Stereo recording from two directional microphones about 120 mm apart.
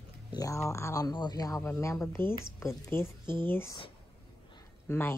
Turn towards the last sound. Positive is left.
turn(degrees=20)  # may be behind; listen again after turning